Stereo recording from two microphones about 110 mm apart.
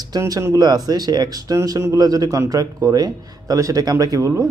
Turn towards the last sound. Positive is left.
turn(degrees=-25)  # may be behind; listen again after turning